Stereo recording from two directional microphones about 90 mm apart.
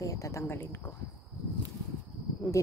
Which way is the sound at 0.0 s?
35° left (ahead or behind).